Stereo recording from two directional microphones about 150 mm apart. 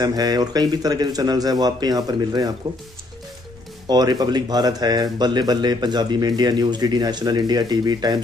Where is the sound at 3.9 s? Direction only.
30° right (ahead or behind).